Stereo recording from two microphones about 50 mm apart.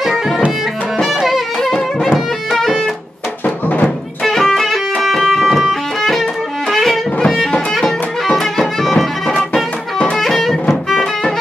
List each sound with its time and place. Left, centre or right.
0.9 s music: centre
3.4 s music: left
4.2 s music: centre
9.3 s music: left
10.1 s music: centre